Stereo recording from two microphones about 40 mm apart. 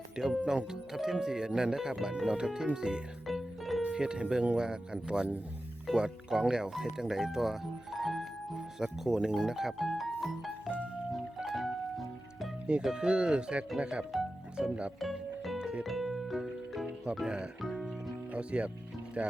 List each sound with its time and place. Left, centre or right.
0.2 s speech: centre
3.2 s music: centre
3.9 s speech: right; by 8.3 s centre
8.8 s speech: centre
11.5 s music: centre
12.8 s speech: centre
15.0 s music: centre
17.2 s speech: right
17.6 s music: centre
18.3 s speech: right